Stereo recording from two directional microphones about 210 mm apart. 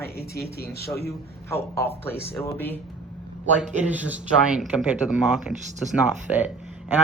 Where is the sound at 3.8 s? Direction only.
5° right (ahead or behind).